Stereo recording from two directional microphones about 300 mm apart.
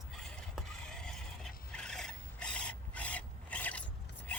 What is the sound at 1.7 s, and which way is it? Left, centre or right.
Rub, centre.